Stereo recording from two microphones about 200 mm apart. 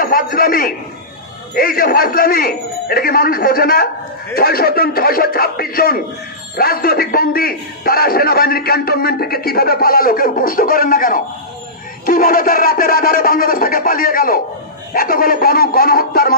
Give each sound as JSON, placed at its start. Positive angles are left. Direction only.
{"t": 0.0, "sound": "a man's voice", "side_deg": 45}